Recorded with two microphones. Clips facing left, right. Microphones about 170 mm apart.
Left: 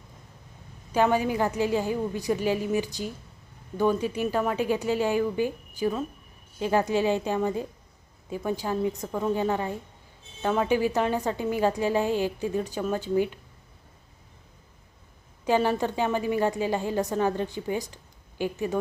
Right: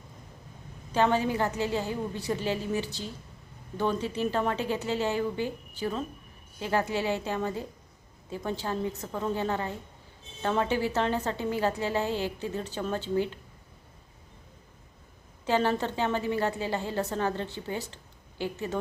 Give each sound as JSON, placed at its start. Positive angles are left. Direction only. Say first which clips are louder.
{"t": 0.9, "sound": "a woman's voice", "louder": "left 2 dB", "side_deg": 10}
{"t": 15.4, "sound": "a woman's voice", "louder": "left 3 dB", "side_deg": 15}